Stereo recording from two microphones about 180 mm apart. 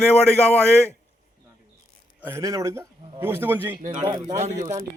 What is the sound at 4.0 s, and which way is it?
Speech, 20° right (ahead or behind).